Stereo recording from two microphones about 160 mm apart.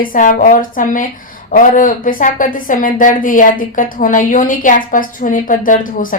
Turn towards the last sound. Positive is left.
turn(degrees=55)  # may be behind; listen again after turning